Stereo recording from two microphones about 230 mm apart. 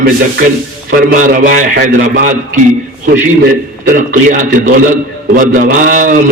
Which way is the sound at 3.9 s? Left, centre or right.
Right.